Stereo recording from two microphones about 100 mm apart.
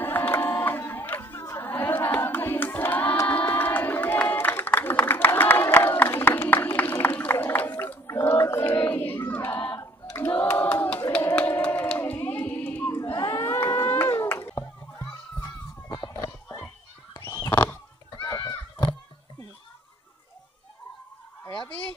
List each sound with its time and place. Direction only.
0.0 s chatter: 20° left (ahead or behind)
1.7 s choir: 20° left (ahead or behind)
3.3 s crowd: 20° left (ahead or behind)
9.8 s a sound: 25° left (ahead or behind)
17.4 s pig: 25° left (ahead or behind)
18.1 s run: 45° left (ahead or behind)